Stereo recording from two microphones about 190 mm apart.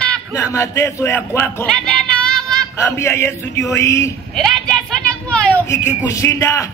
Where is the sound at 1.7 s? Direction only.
5° left (ahead or behind).